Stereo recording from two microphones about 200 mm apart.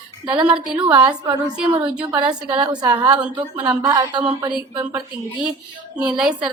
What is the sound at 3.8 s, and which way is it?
Speech, 20° right (ahead or behind).